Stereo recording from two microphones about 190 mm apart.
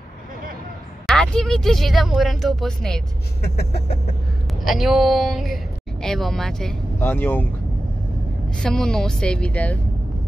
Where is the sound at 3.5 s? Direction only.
55° left (ahead or behind).